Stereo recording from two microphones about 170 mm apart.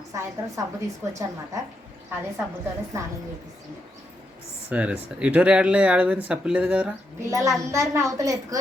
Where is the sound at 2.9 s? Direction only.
15° right (ahead or behind).